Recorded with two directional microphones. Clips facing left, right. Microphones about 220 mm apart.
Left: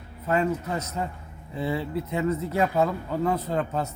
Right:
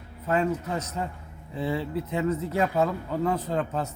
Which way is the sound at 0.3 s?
5° left (ahead or behind).